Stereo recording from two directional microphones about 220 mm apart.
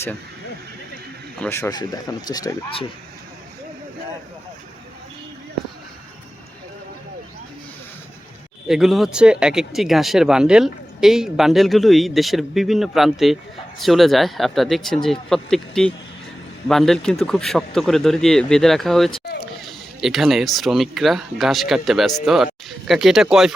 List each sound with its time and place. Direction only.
1.4 s speech: 10° left (ahead or behind)
8.6 s speech: centre (ahead or behind)